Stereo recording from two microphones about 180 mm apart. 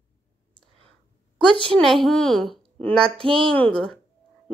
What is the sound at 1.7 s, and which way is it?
A child's voice, centre (ahead or behind).